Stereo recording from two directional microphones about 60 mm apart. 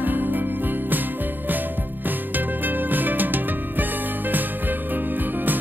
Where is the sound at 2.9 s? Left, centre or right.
Right.